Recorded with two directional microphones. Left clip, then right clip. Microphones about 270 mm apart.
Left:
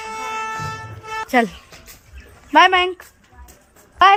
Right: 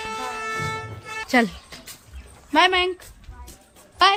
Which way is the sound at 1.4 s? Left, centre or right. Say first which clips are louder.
Left 3 dB; centre.